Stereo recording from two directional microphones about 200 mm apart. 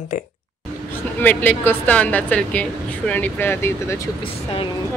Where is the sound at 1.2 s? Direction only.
10° left (ahead or behind).